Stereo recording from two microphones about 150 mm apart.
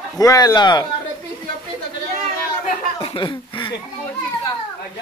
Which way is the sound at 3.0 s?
35° left (ahead or behind).